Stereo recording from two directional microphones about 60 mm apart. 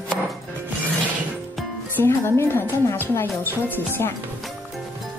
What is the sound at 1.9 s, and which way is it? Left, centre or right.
Speech, left.